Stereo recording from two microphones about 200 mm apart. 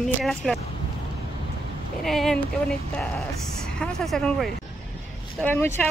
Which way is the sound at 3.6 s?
Centre (ahead or behind).